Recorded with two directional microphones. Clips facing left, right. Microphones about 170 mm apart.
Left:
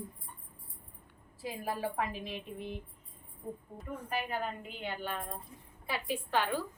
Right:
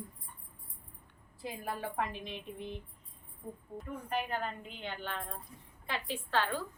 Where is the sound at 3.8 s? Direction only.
5° left (ahead or behind).